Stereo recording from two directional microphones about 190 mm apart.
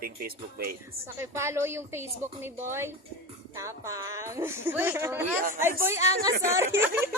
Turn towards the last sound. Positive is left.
turn(degrees=-10)  # may be behind; listen again after turning